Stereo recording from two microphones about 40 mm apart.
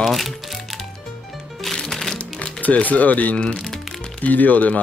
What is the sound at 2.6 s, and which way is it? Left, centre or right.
Speech, left.